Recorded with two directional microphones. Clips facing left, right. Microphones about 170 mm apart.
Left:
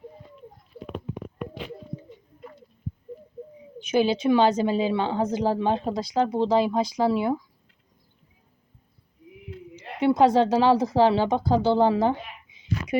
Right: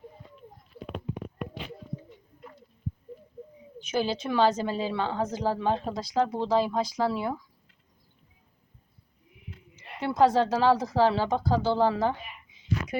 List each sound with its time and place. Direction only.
3.8 s a woman's voice: 20° left (ahead or behind)
9.7 s bird: 60° left (ahead or behind)
10.0 s a woman's voice: 20° left (ahead or behind)